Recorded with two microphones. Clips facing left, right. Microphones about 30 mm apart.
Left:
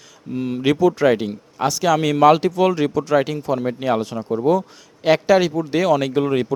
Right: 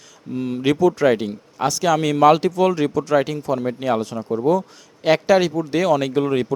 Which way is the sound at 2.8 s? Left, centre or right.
Centre.